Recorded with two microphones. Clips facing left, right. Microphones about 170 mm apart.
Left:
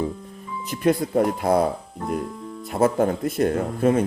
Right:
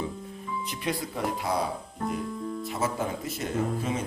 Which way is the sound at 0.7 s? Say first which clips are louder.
Left 14 dB; 50° left (ahead or behind).